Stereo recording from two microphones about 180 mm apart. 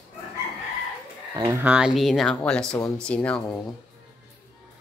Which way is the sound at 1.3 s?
25° right (ahead or behind).